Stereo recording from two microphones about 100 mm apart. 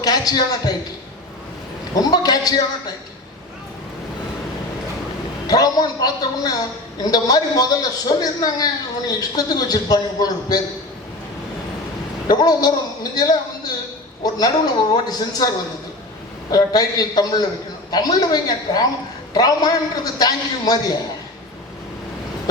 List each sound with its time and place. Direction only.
0.0 s a man's voice: 40° left (ahead or behind)
2.0 s a man's voice: 40° left (ahead or behind)
5.5 s a man's voice: 40° left (ahead or behind)
12.3 s a man's voice: 40° left (ahead or behind)
16.5 s a man's voice: 40° left (ahead or behind)